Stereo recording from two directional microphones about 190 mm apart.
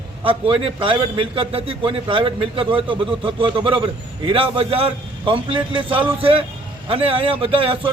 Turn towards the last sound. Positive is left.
turn(degrees=-30)  # may be behind; listen again after turning